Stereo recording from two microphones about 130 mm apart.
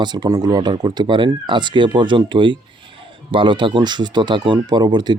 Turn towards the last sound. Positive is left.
turn(degrees=-35)  # may be behind; listen again after turning